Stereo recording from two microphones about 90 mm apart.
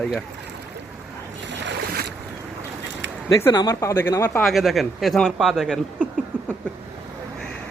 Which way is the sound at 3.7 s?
30° left (ahead or behind).